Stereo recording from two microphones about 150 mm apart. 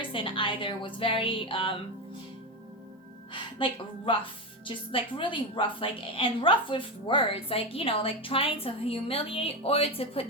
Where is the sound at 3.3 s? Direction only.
35° left (ahead or behind).